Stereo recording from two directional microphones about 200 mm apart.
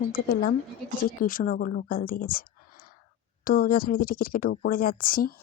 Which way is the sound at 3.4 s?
45° left (ahead or behind).